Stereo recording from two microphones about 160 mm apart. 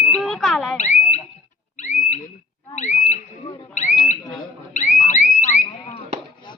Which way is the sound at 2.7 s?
45° left (ahead or behind).